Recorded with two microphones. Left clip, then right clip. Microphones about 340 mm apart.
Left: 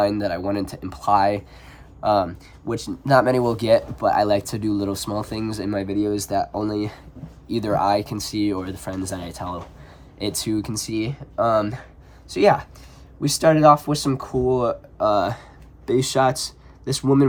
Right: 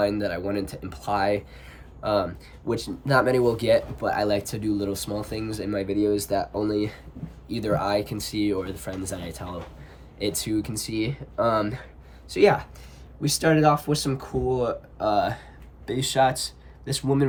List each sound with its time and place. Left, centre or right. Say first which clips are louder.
0.0 s speech: left 4 dB; centre